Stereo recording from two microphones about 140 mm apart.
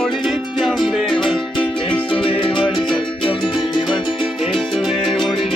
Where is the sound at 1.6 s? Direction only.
40° left (ahead or behind).